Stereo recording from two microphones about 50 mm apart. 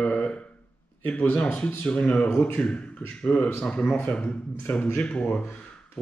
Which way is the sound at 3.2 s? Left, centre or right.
Left.